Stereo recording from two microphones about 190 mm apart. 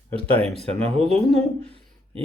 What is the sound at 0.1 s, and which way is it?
A man's voice, 30° right (ahead or behind).